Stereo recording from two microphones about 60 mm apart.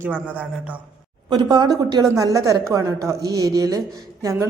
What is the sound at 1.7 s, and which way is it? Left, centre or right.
A woman's voice, right.